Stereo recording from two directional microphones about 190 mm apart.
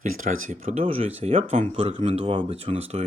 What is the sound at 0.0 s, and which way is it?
Speech, 45° right (ahead or behind).